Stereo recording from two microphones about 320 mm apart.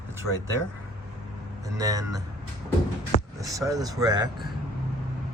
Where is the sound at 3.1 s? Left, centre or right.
Centre.